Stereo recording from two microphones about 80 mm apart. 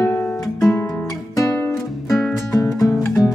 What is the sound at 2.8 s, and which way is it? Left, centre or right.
Music, left.